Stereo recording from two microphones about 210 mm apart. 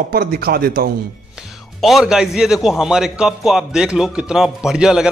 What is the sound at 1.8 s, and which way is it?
A man's voice, centre (ahead or behind).